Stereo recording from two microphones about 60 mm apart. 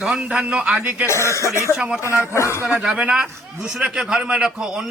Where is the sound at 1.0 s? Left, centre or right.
Left.